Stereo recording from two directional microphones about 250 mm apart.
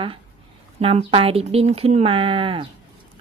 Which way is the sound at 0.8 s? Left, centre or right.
Right.